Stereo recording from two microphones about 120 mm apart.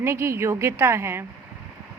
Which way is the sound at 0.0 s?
20° right (ahead or behind).